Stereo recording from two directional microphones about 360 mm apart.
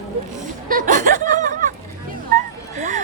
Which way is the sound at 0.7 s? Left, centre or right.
Right.